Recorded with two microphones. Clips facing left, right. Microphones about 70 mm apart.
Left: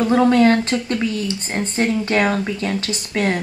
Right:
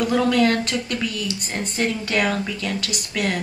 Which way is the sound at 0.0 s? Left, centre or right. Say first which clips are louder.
Left 5 dB; left.